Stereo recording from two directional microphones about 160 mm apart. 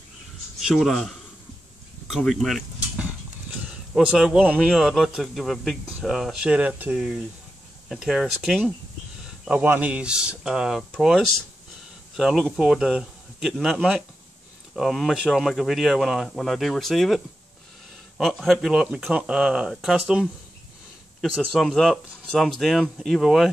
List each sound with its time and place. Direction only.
0.6 s speech: centre (ahead or behind)
2.0 s a sound: centre (ahead or behind)
3.9 s speech: 5° right (ahead or behind)